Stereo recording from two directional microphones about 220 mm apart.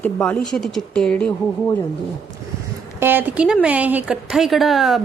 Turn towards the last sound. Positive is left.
turn(degrees=0)  # may be behind; listen again after turning